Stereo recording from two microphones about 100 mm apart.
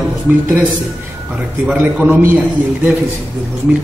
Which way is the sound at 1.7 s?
10° right (ahead or behind).